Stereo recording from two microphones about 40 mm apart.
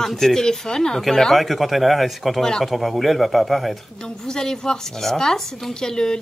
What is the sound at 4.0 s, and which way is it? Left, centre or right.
Speech, centre.